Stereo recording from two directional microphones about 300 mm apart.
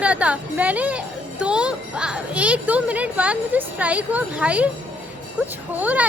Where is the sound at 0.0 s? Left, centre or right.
Centre.